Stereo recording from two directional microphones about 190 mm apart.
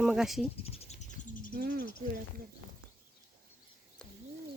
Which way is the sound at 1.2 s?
45° left (ahead or behind).